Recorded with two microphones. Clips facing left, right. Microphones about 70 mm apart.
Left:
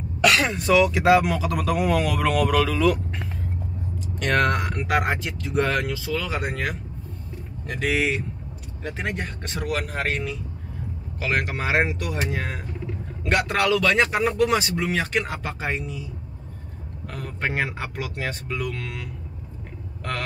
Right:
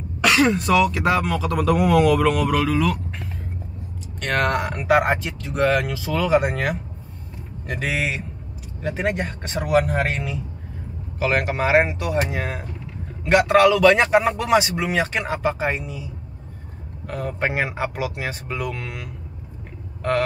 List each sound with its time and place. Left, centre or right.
0.2 s speech: centre
9.6 s speech: centre
9.8 s speech: centre
17.1 s speech: centre